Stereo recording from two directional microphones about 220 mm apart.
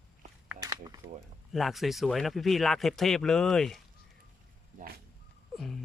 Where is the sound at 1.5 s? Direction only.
Centre (ahead or behind).